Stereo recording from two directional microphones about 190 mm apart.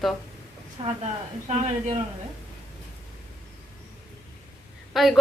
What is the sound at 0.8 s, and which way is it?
Speech, 30° right (ahead or behind).